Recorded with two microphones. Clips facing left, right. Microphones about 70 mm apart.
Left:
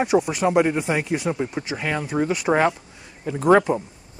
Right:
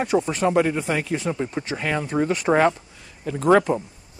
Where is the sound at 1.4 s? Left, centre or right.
Centre.